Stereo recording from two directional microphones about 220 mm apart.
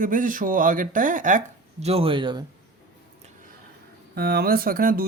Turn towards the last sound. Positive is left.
turn(degrees=-40)  # may be behind; listen again after turning